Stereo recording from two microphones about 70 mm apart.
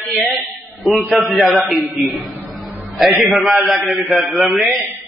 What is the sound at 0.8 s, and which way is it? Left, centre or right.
A man's voice, centre.